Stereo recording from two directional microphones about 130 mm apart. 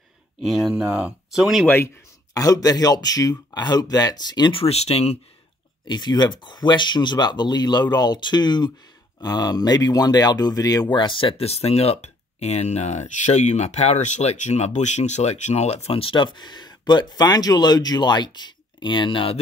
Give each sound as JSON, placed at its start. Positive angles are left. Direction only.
{"t": 0.5, "sound": "speech", "side_deg": -5}
{"t": 2.3, "sound": "speech", "side_deg": 30}
{"t": 5.9, "sound": "speech", "side_deg": 35}